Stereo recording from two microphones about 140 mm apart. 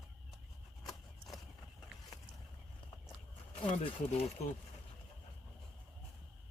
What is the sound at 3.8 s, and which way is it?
Speech, 45° left (ahead or behind).